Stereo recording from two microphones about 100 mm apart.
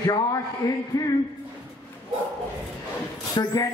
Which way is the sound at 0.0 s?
40° left (ahead or behind).